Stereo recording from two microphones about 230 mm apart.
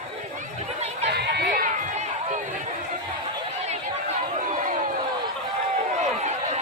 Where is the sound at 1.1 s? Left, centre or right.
Right.